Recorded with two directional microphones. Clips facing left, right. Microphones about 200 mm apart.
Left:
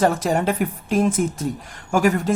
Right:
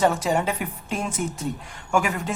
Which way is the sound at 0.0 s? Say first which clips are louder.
Left 2 dB; 45° left (ahead or behind).